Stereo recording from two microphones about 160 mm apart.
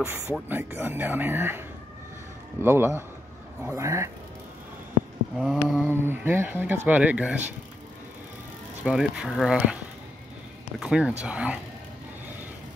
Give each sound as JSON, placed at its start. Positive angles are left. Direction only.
{"t": 0.0, "sound": "speech", "side_deg": -15}
{"t": 2.6, "sound": "speech", "side_deg": -15}
{"t": 5.4, "sound": "speech", "side_deg": 0}
{"t": 8.8, "sound": "speech", "side_deg": -5}
{"t": 10.8, "sound": "speech", "side_deg": -5}